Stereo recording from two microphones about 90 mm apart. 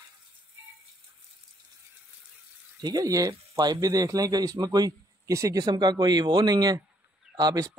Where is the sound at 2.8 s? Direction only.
45° right (ahead or behind).